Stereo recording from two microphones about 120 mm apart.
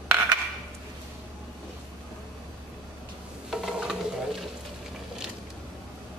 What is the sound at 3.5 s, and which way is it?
Stir, 5° right (ahead or behind).